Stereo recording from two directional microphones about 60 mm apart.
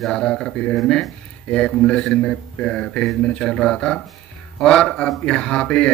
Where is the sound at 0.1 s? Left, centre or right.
Centre.